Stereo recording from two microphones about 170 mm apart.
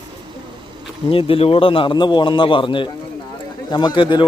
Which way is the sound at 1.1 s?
35° left (ahead or behind).